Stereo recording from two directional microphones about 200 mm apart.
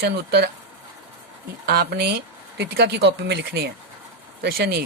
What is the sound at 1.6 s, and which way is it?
Speech, 50° right (ahead or behind).